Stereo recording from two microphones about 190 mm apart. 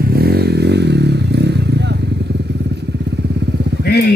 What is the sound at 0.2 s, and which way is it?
Vehicle, 55° right (ahead or behind).